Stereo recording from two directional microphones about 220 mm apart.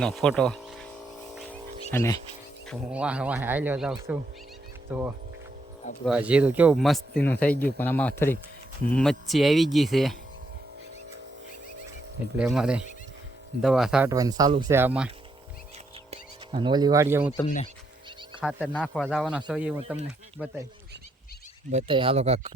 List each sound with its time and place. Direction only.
0.0 s speech: 5° left (ahead or behind)
1.4 s wild animals: 10° left (ahead or behind)
2.6 s speech: 5° right (ahead or behind)
12.4 s speech: 5° right (ahead or behind)
14.1 s speech: 15° right (ahead or behind)
16.0 s speech: 20° right (ahead or behind)
17.4 s speech: 30° left (ahead or behind)
18.4 s speech: 5° left (ahead or behind)
21.7 s speech: 25° right (ahead or behind)